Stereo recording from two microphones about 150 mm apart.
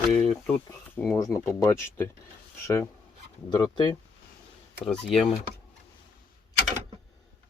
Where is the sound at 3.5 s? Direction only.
25° left (ahead or behind).